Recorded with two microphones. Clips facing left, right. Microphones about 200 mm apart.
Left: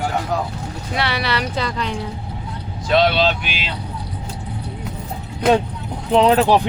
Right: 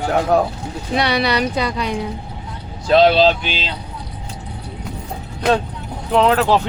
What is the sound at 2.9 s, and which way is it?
Speech, 35° right (ahead or behind).